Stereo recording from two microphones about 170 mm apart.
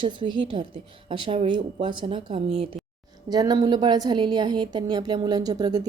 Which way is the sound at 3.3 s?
20° right (ahead or behind).